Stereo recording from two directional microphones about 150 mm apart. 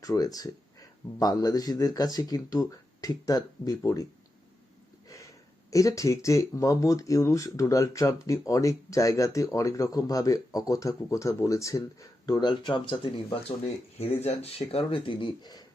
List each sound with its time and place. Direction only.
0.0 s speech: 25° left (ahead or behind)
5.0 s a sound: 20° left (ahead or behind)
5.7 s speech: 20° left (ahead or behind)